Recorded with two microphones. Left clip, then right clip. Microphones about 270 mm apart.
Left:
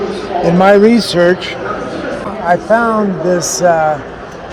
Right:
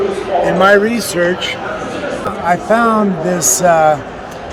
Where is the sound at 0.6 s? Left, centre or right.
Left.